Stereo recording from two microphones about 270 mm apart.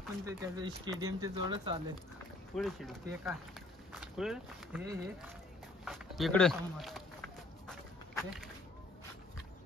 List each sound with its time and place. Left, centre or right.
0.2 s speech: centre
2.5 s speech: centre
5.9 s walk: centre